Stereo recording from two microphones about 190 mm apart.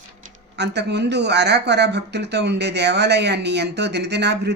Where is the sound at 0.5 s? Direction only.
60° right (ahead or behind).